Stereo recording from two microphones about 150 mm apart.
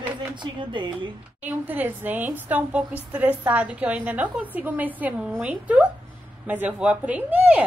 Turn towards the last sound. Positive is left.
turn(degrees=-10)  # may be behind; listen again after turning